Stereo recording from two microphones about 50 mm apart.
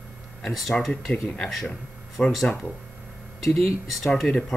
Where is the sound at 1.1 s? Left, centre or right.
Centre.